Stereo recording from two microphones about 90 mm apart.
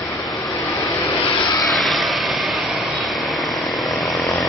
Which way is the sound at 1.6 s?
Centre (ahead or behind).